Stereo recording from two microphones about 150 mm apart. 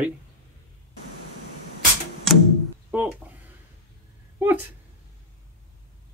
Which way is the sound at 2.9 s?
10° right (ahead or behind).